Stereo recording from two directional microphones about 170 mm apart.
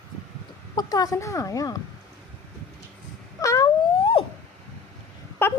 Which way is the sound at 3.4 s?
20° left (ahead or behind).